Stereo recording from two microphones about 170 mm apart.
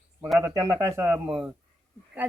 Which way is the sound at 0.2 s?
5° right (ahead or behind).